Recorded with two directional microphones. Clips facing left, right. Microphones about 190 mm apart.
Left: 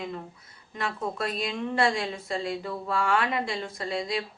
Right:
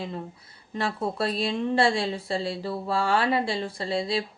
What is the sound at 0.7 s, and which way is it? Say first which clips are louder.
A woman's voice: right 3 dB; 30° right (ahead or behind).